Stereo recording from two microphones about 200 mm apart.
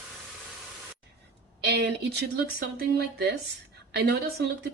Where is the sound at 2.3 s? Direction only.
50° right (ahead or behind).